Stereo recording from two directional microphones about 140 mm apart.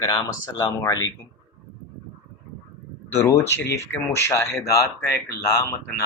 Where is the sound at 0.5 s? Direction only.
25° left (ahead or behind).